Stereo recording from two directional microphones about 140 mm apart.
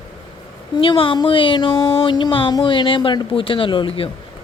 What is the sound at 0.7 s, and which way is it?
A child's voice, 35° left (ahead or behind).